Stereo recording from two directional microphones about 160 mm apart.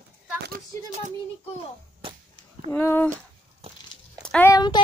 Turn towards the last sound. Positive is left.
turn(degrees=25)  # may be behind; listen again after turning